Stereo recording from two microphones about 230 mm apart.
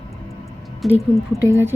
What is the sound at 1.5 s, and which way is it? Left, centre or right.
Speech, centre.